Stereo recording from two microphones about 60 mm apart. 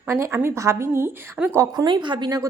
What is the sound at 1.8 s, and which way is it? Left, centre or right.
Speech, right.